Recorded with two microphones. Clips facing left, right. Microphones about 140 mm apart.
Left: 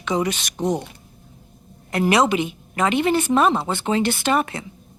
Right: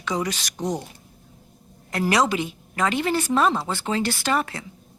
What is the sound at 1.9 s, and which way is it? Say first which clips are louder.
A woman's voice: left 3 dB; 20° left (ahead or behind).